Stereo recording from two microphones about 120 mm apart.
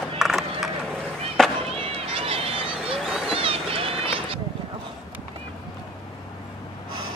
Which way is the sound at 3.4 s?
50° right (ahead or behind).